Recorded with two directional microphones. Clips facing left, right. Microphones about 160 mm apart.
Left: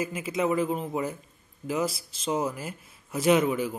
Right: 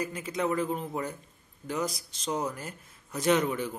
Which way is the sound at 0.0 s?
5° left (ahead or behind).